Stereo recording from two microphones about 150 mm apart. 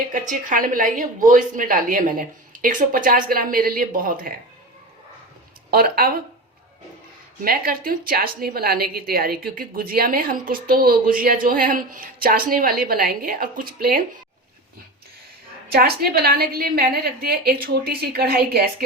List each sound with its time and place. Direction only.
0.1 s a woman's voice: 60° right (ahead or behind)
5.7 s speech: 80° right
7.4 s a woman's voice: 80° right
15.7 s a woman's voice: 90° right